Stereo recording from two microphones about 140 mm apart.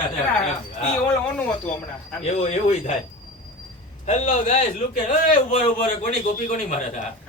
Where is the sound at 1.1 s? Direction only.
10° left (ahead or behind).